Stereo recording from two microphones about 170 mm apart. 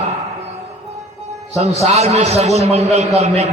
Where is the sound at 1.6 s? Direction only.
40° right (ahead or behind).